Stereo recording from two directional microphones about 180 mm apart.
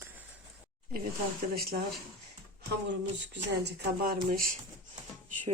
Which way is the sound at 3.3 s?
70° right (ahead or behind).